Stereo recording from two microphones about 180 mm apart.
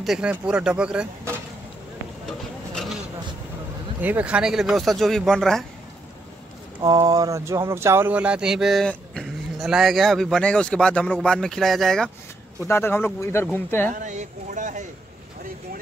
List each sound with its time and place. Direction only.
0.0 s speech: 5° right (ahead or behind)
2.2 s a sound: centre (ahead or behind)
4.0 s speech: 10° right (ahead or behind)
6.8 s speech: 20° right (ahead or behind); by 12.1 s centre (ahead or behind)
12.6 s speech: 15° left (ahead or behind)
13.9 s speech: 45° right (ahead or behind)